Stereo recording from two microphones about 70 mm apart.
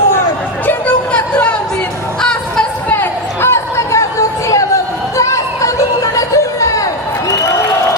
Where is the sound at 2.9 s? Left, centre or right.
Left.